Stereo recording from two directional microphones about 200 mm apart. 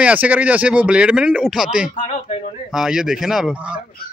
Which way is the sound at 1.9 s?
35° left (ahead or behind).